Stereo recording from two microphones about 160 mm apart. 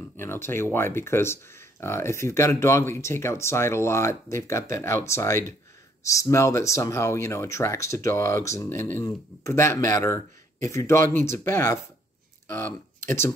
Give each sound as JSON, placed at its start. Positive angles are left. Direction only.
{"t": 0.2, "sound": "speech", "side_deg": 15}